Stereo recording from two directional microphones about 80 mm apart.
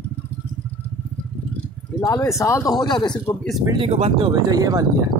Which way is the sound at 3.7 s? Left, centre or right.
Right.